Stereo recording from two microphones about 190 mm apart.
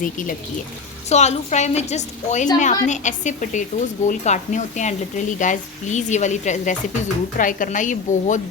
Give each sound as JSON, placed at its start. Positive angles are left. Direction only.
{"t": 0.0, "sound": "a woman's voice", "side_deg": 45}